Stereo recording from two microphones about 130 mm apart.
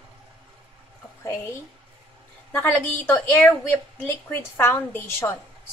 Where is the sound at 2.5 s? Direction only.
15° left (ahead or behind).